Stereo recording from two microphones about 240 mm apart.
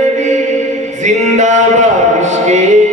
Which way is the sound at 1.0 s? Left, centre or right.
Right.